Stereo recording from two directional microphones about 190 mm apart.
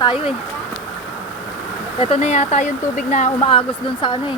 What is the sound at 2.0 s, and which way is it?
Speech, 35° left (ahead or behind).